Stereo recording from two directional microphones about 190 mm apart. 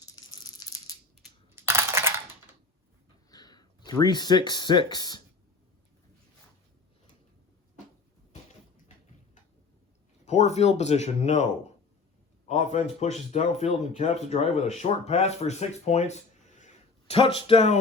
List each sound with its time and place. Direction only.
0.0 s rattle: 20° left (ahead or behind)
1.5 s coin: 15° right (ahead or behind)
3.2 s speech: 20° left (ahead or behind)
10.2 s speech: 35° left (ahead or behind)
12.5 s speech: 35° left (ahead or behind)